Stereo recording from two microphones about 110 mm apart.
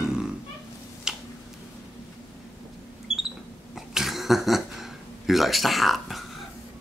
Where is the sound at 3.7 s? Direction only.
Centre (ahead or behind).